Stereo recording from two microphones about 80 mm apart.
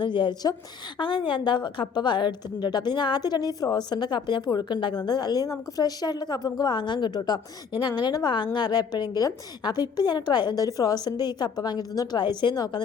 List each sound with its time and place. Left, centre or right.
0.0 s a woman's voice: left
0.9 s a woman's voice: left
5.0 s a woman's voice: left